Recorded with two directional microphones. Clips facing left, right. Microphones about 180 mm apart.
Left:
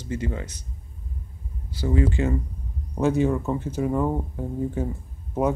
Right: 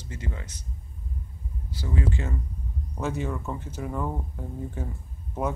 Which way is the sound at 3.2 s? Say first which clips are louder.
Left 9 dB; 20° left (ahead or behind).